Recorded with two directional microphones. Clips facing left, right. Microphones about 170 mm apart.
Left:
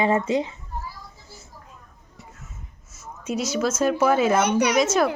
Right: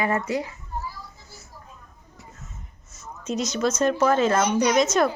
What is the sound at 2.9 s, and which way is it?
Speech, 10° left (ahead or behind).